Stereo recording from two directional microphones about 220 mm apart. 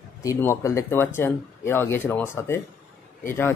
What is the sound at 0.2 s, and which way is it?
A man's voice, 15° left (ahead or behind).